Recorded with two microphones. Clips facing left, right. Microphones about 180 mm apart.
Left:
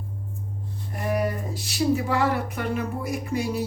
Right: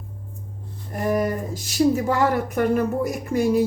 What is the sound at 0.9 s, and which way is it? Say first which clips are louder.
Speech: right 4 dB; 45° right (ahead or behind).